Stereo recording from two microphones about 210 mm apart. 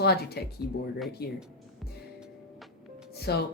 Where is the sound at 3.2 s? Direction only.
50° left (ahead or behind).